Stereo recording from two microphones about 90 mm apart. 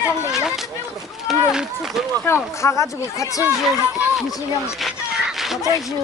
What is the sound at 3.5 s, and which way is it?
Speech, 5° right (ahead or behind).